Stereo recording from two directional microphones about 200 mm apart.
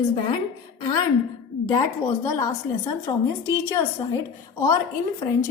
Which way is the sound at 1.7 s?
15° left (ahead or behind).